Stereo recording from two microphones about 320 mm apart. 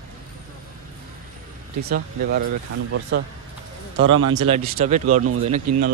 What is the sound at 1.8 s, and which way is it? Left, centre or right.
Speech, right.